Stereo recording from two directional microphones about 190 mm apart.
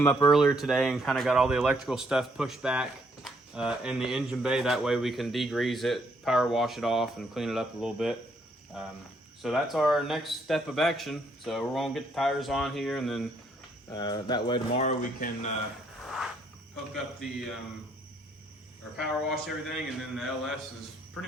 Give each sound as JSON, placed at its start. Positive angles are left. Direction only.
{"t": 0.0, "sound": "speech", "side_deg": 15}
{"t": 0.3, "sound": "speech", "side_deg": 0}
{"t": 13.9, "sound": "speech", "side_deg": 20}
{"t": 16.0, "sound": "a sound", "side_deg": 0}
{"t": 18.9, "sound": "speech", "side_deg": 0}